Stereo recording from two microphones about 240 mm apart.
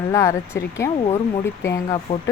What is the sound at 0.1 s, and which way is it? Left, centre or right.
Speech, centre.